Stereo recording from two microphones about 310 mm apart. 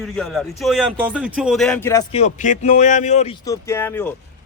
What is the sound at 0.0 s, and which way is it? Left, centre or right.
A man's voice, centre.